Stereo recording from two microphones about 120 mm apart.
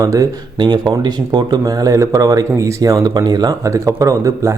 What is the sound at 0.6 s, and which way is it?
Speech, 40° right (ahead or behind).